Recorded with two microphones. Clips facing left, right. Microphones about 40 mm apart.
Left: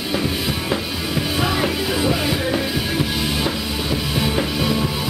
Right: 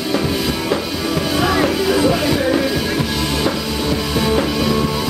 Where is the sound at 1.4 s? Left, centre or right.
Centre.